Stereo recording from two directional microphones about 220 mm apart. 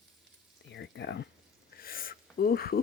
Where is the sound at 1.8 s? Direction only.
40° left (ahead or behind).